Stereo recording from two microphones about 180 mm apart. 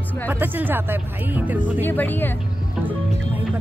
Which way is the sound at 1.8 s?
10° left (ahead or behind).